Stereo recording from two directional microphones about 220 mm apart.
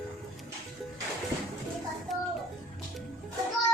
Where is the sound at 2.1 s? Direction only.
Centre (ahead or behind).